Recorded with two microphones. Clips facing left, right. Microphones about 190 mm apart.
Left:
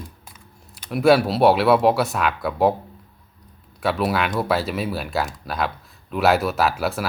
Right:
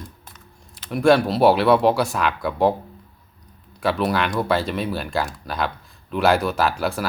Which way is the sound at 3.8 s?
Centre (ahead or behind).